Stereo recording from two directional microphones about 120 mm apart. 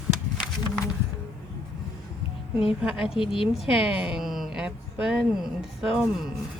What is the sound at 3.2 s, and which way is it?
Speech, 45° left (ahead or behind).